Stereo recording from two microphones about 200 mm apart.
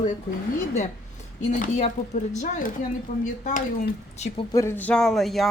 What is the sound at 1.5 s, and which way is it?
Speech, 40° left (ahead or behind).